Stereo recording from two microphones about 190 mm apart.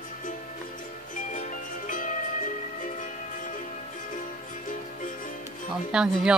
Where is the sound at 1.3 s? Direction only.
40° left (ahead or behind).